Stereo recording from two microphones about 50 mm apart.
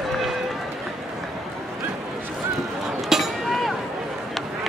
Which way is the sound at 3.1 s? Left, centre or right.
Centre.